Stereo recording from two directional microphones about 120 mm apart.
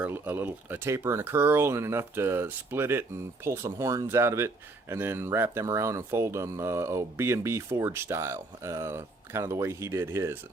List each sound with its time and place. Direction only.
0.0 s speech: 15° right (ahead or behind)